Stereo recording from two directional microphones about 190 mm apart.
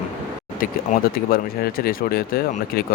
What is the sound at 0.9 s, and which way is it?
Speech, 40° left (ahead or behind).